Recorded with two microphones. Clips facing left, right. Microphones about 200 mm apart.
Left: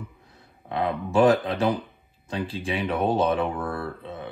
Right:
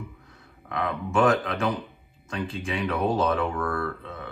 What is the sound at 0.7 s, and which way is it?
Speech, 30° left (ahead or behind).